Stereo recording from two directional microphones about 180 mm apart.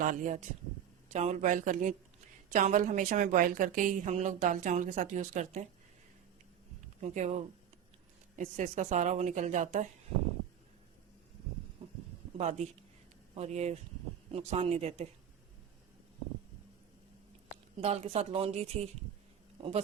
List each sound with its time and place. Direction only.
0.0 s a woman's voice: 45° right (ahead or behind)
7.0 s a woman's voice: 40° right (ahead or behind)
11.8 s a sound: 35° right (ahead or behind)
12.4 s a woman's voice: 40° right (ahead or behind)
17.7 s a woman's voice: 35° right (ahead or behind)